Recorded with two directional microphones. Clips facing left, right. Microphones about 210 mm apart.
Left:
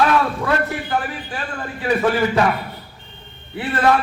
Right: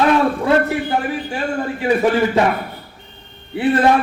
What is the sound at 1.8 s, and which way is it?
Speech, 20° right (ahead or behind).